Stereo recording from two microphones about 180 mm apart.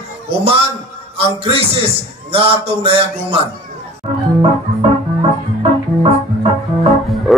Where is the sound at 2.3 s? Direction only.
30° right (ahead or behind).